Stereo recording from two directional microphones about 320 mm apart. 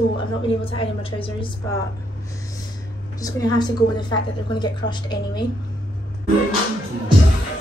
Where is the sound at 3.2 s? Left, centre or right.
Centre.